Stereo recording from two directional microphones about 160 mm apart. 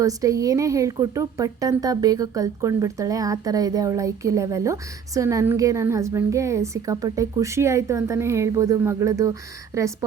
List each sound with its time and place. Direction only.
0.0 s a woman's voice: 20° right (ahead or behind)